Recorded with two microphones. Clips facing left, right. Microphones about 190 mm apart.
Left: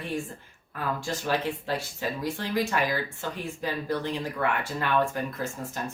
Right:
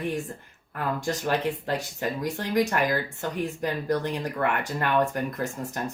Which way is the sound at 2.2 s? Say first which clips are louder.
Right 4 dB; 20° right (ahead or behind).